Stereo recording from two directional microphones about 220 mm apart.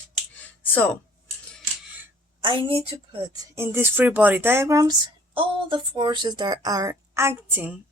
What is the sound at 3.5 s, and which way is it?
Speech, 10° right (ahead or behind).